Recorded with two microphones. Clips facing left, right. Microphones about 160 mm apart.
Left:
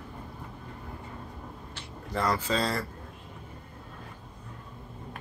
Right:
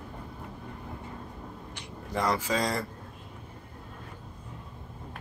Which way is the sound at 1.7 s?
15° right (ahead or behind).